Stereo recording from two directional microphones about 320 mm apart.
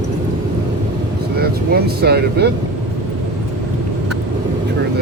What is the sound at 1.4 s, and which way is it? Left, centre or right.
Vehicle, right.